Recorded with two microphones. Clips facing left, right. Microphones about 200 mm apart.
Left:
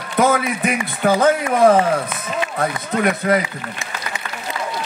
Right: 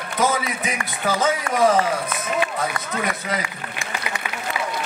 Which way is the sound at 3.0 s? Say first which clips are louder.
Left 11 dB; 55° left (ahead or behind).